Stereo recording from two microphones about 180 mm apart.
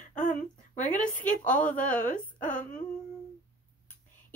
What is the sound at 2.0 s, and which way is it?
Speech, 45° left (ahead or behind).